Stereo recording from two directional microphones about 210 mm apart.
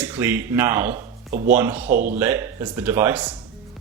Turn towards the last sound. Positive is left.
turn(degrees=-10)  # may be behind; listen again after turning